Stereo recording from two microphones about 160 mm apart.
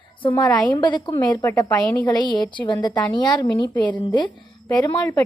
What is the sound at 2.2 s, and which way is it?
A woman's voice, 30° left (ahead or behind).